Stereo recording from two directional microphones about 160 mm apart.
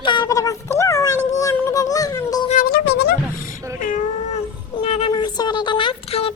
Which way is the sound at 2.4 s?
60° left (ahead or behind).